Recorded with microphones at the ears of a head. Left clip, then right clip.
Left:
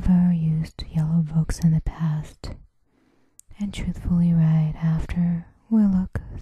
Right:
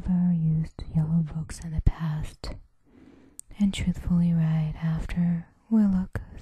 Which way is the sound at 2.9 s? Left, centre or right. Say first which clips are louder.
Right 9 dB; right.